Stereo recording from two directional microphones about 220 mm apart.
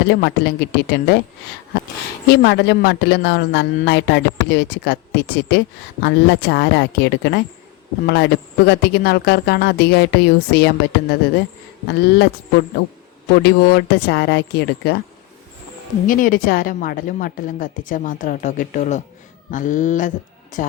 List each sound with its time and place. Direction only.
0.1 s a man's voice: 45° left (ahead or behind)
2.2 s a man's voice: 45° left (ahead or behind)
11.9 s a man's voice: 50° left (ahead or behind)
16.0 s a woman's voice: 40° left (ahead or behind)